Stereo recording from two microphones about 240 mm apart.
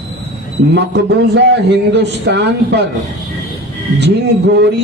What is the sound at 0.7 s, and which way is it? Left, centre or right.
A man's voice, right.